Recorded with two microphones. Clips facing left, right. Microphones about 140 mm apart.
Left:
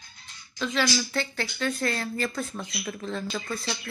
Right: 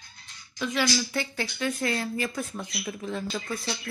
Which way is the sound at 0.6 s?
10° right (ahead or behind).